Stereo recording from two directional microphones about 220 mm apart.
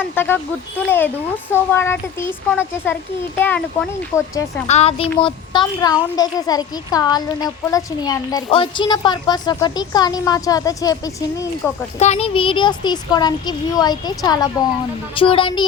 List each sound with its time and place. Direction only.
0.2 s a child's voice: 10° left (ahead or behind)
4.7 s a child's voice: 30° left (ahead or behind)
11.9 s a child's voice: 30° left (ahead or behind)